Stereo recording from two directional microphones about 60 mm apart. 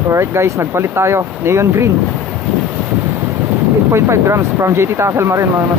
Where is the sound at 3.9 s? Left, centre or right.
Right.